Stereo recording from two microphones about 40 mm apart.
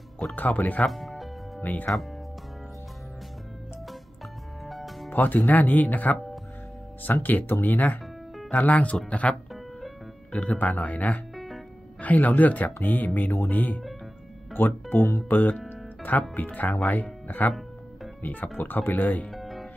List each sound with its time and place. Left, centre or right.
0.4 s speech: left
0.8 s music: centre
1.6 s speech: left
4.6 s music: centre
5.1 s speech: left
7.2 s speech: left
9.5 s music: centre
10.4 s speech: left
11.3 s music: centre
12.0 s speech: left
14.5 s speech: left
16.0 s speech: left
18.6 s speech: left
19.3 s music: centre